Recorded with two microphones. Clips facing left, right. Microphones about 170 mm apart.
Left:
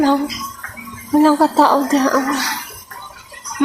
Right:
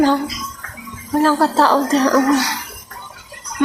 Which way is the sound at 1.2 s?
15° left (ahead or behind).